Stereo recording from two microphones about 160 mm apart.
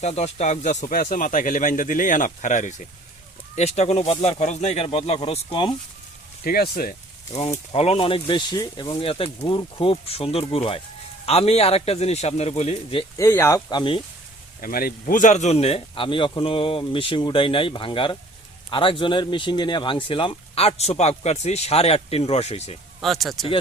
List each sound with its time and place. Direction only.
0.0 s speech: 45° left (ahead or behind)
6.4 s speech: 70° left (ahead or behind)
7.7 s speech: 40° left (ahead or behind)
13.1 s speech: 15° left (ahead or behind)
13.7 s speech: 30° left (ahead or behind)
14.6 s speech: 65° left (ahead or behind); by 22.8 s 40° left (ahead or behind)
23.0 s speech: centre (ahead or behind)